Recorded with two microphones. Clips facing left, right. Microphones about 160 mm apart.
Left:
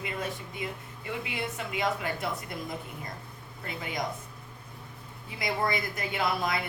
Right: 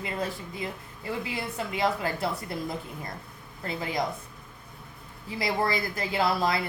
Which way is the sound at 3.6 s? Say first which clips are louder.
Right 5 dB; 30° right (ahead or behind).